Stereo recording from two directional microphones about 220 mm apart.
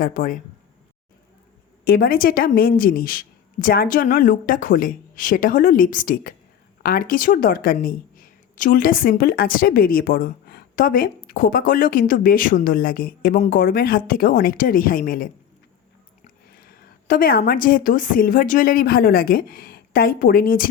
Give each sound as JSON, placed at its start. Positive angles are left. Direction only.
{"t": 0.0, "sound": "a woman's voice", "side_deg": 40}
{"t": 1.8, "sound": "a woman's voice", "side_deg": 40}
{"t": 16.5, "sound": "a woman's voice", "side_deg": 40}